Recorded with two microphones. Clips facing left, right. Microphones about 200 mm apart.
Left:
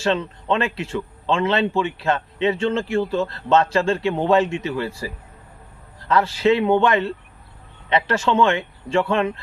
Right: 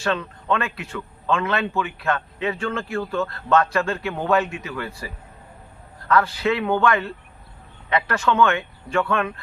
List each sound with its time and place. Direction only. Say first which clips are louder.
0.0 s a man's voice: left 3 dB; 25° left (ahead or behind)